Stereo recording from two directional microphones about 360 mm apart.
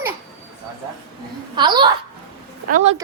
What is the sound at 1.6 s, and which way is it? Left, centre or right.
A child's voice, centre.